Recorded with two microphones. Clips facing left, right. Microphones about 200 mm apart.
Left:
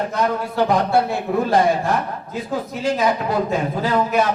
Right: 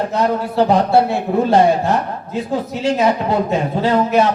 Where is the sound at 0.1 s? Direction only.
30° right (ahead or behind).